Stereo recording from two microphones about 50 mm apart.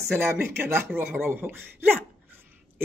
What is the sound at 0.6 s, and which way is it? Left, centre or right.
Speech, right.